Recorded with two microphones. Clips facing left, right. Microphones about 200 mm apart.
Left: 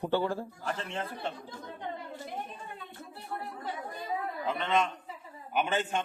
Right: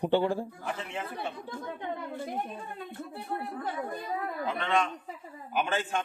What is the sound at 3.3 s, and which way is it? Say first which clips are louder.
Speech: right 3 dB; 55° right (ahead or behind).